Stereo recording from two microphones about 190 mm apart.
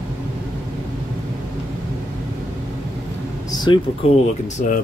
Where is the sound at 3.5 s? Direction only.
25° left (ahead or behind).